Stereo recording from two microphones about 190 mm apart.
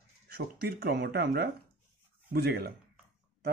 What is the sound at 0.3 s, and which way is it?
Speech, 55° right (ahead or behind).